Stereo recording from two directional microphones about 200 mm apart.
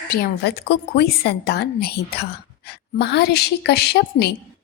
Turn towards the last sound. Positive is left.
turn(degrees=55)  # may be behind; listen again after turning